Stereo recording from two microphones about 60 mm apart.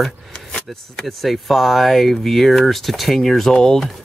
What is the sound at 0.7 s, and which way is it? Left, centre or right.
Speech, centre.